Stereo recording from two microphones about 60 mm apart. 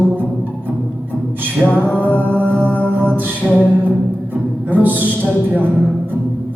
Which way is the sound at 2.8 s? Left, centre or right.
Right.